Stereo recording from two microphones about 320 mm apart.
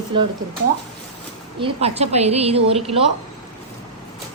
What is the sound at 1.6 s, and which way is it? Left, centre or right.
A woman's voice, centre.